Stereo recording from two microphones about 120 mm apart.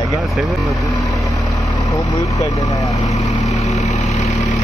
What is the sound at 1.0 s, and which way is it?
Vehicle, centre (ahead or behind).